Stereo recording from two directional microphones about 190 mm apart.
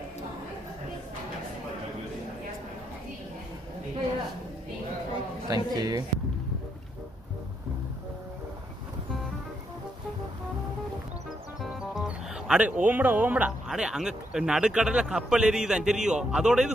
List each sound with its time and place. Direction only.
5.5 s speech: 20° right (ahead or behind)
12.4 s speech: 5° right (ahead or behind)